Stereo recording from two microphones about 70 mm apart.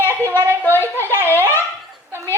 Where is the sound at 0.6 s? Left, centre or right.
Left.